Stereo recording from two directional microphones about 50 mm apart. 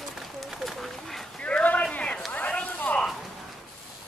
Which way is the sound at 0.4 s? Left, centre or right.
Centre.